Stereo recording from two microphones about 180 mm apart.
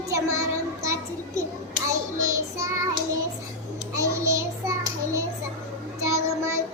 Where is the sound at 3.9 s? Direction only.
15° right (ahead or behind).